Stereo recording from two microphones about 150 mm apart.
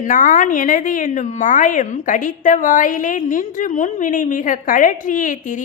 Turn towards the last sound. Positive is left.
turn(degrees=60)  # may be behind; listen again after turning